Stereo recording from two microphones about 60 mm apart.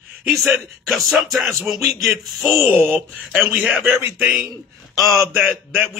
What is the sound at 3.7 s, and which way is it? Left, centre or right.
Speech, right.